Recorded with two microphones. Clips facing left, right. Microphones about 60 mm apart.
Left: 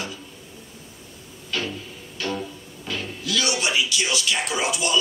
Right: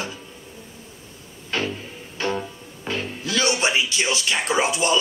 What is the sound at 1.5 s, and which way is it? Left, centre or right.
Music, right.